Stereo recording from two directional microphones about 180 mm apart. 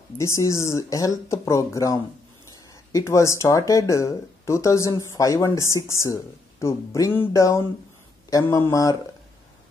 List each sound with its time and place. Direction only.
0.2 s speech: 15° left (ahead or behind)